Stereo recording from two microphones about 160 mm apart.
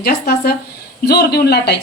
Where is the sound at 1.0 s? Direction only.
85° left.